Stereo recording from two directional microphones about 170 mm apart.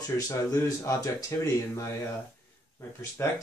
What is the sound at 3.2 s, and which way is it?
Speech, 15° left (ahead or behind).